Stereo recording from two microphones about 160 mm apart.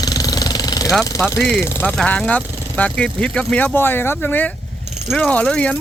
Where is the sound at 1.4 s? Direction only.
10° left (ahead or behind).